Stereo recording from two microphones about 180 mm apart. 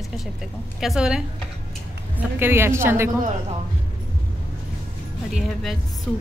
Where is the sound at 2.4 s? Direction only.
15° right (ahead or behind).